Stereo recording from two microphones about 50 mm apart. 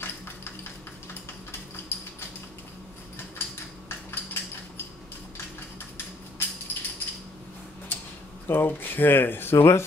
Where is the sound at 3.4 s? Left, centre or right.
Left.